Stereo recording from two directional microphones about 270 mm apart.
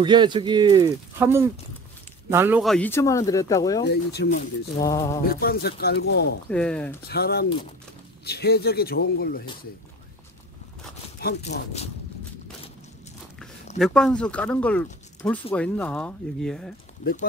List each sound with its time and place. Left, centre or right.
0.0 s speech: centre
3.8 s speech: left
4.7 s speech: centre
5.2 s speech: left
6.5 s speech: centre
7.1 s speech: left
11.1 s speech: left
13.7 s speech: centre
17.0 s speech: left